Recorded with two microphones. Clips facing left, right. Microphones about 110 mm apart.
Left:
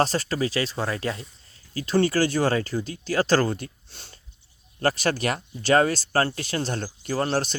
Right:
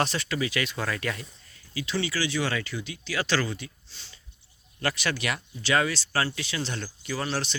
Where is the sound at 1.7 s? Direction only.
45° left (ahead or behind).